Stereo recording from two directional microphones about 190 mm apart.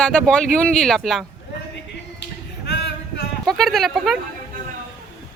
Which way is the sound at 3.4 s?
Centre (ahead or behind).